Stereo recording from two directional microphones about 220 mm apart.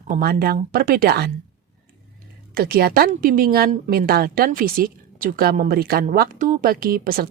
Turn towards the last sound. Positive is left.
turn(degrees=-40)  # may be behind; listen again after turning